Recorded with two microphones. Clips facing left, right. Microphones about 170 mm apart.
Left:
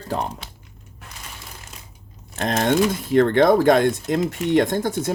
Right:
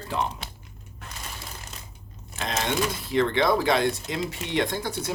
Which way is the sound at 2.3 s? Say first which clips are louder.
Left 8 dB; 50° left (ahead or behind).